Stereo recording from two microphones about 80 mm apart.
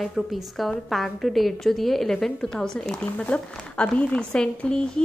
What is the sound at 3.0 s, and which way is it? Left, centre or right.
Speech, centre.